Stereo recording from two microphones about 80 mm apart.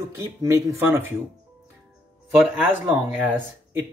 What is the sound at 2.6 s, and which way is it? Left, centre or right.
Speech, right.